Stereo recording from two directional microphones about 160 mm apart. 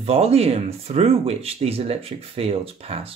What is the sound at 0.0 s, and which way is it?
Speech, 40° right (ahead or behind).